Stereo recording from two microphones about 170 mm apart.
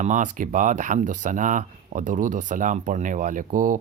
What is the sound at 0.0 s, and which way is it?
Speech, 50° right (ahead or behind).